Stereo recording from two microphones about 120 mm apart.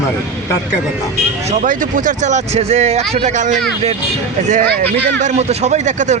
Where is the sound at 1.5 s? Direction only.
90° right.